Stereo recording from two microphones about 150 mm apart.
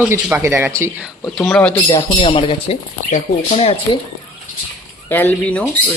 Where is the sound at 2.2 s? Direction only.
35° left (ahead or behind).